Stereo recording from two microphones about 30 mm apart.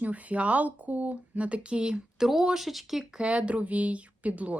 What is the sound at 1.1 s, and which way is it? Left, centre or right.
Speech, right.